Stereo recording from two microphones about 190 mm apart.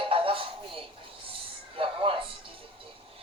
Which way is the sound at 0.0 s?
30° right (ahead or behind).